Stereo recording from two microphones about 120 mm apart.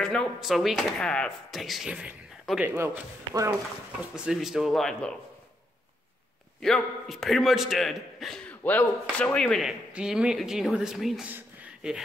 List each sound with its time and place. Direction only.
0.0 s speech: 5° left (ahead or behind)
2.6 s speech: 20° right (ahead or behind)
4.1 s speech: 5° right (ahead or behind)
6.6 s speech: 5° left (ahead or behind)
8.5 s a sound: 15° left (ahead or behind)
9.2 s speech: 10° left (ahead or behind)
11.2 s a sound: 15° right (ahead or behind)